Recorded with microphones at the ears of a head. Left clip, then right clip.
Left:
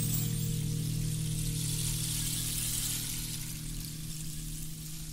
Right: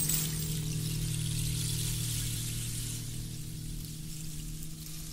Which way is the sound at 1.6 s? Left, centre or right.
Centre.